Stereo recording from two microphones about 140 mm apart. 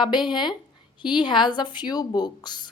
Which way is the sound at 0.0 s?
30° left (ahead or behind).